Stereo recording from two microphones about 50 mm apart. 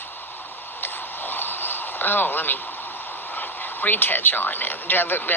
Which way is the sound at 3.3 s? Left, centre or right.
Left.